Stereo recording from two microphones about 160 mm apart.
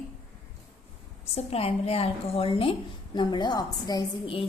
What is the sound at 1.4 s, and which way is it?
A woman's voice, 40° left (ahead or behind).